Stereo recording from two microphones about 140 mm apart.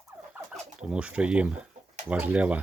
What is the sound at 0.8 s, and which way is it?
Speech, 5° right (ahead or behind).